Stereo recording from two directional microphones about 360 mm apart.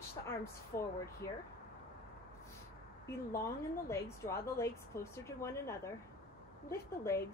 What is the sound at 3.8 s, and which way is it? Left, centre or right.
A woman's voice, centre.